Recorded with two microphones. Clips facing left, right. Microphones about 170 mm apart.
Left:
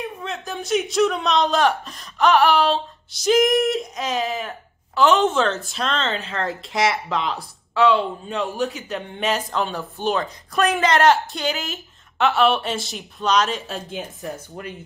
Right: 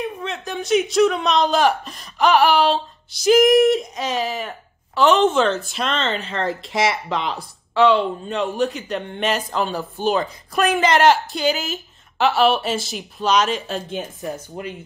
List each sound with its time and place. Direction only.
0.0 s speech: centre (ahead or behind)
14.2 s speech: 20° right (ahead or behind)